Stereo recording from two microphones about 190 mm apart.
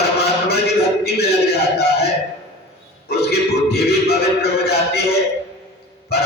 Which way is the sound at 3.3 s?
60° left (ahead or behind).